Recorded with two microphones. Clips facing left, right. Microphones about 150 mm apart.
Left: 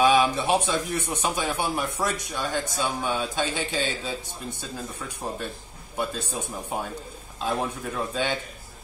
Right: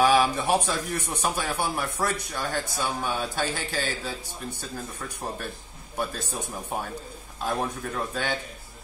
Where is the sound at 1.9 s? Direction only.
15° left (ahead or behind).